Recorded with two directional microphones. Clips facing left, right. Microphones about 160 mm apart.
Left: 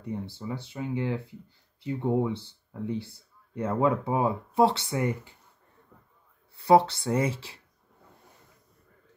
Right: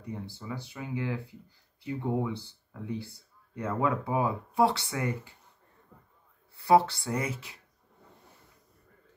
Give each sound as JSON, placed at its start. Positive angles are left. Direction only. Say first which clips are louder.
{"t": 0.1, "sound": "speech", "louder": "left 4 dB", "side_deg": 30}
{"t": 6.5, "sound": "speech", "louder": "left 2 dB", "side_deg": 20}